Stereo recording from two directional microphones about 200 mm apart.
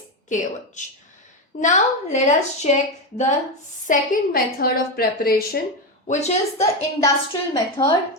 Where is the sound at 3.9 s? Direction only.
45° left (ahead or behind).